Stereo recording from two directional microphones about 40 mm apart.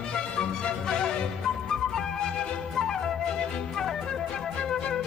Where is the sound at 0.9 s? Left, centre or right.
Centre.